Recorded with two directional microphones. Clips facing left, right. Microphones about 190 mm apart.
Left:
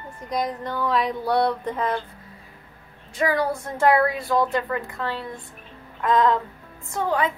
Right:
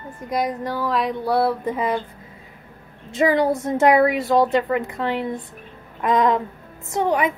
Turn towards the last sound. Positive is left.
turn(degrees=-20)  # may be behind; listen again after turning